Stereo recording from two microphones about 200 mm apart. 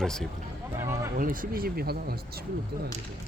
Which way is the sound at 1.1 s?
45° right (ahead or behind).